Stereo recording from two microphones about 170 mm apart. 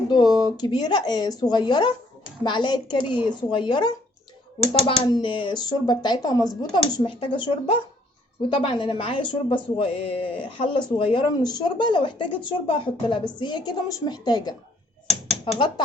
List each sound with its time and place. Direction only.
0.1 s a woman's voice: 25° left (ahead or behind)